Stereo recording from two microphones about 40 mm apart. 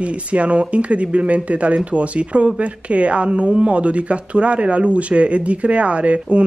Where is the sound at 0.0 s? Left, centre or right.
Right.